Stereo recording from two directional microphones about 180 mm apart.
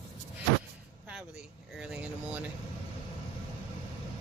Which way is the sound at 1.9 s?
10° right (ahead or behind).